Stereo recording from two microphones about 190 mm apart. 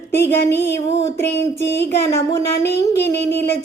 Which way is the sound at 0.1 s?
10° left (ahead or behind).